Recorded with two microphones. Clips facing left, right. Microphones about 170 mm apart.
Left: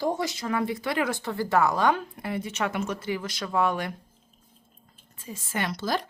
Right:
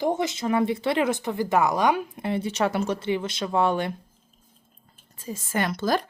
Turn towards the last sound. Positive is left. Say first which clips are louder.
# right 4 dB
turn(degrees=-55)  # may be behind; listen again after turning